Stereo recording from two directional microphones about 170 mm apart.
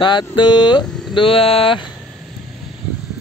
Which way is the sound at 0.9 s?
Centre (ahead or behind).